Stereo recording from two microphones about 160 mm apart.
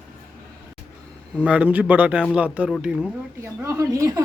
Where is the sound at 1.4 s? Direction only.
10° right (ahead or behind).